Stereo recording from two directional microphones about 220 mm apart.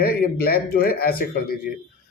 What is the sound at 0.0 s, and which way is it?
A man's voice, 45° left (ahead or behind).